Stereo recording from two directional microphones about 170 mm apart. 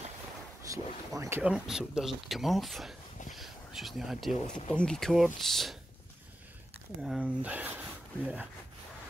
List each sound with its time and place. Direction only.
0.7 s a sound: 20° right (ahead or behind)
1.4 s speech: 5° right (ahead or behind)
7.0 s speech: 5° right (ahead or behind)